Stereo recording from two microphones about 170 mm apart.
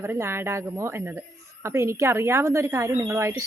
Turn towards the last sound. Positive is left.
turn(degrees=-15)  # may be behind; listen again after turning